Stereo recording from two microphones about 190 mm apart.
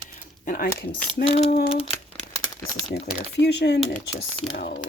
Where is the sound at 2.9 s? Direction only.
60° left (ahead or behind).